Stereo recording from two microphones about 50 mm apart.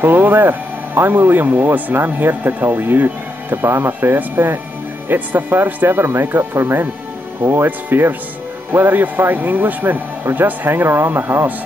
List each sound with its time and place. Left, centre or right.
0.0 s speech: right